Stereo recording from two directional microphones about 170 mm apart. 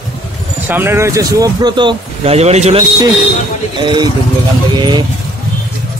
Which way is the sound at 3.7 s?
25° right (ahead or behind).